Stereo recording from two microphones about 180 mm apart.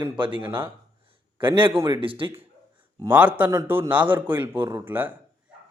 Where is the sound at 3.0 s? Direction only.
10° right (ahead or behind).